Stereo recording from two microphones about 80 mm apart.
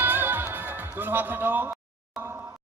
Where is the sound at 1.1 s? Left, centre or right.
Right.